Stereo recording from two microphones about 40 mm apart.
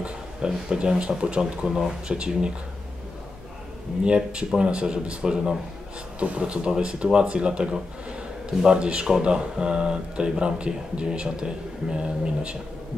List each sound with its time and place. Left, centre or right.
0.7 s speech: right
4.0 s speech: right
6.1 s a man's voice: right